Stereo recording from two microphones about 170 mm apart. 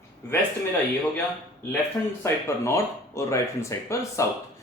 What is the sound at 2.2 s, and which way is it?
Speech, 15° left (ahead or behind).